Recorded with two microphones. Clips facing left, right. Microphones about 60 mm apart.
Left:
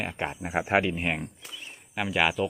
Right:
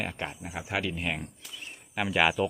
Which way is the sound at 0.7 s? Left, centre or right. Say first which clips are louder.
Left 4 dB; left.